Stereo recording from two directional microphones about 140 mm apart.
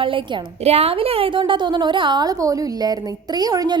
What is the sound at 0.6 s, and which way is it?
A woman's voice, 45° right (ahead or behind).